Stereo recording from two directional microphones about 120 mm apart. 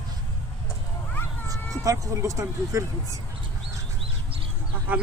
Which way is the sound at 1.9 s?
25° right (ahead or behind).